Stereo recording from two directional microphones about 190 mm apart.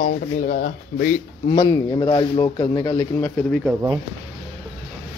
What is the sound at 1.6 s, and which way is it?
Speech, 20° left (ahead or behind).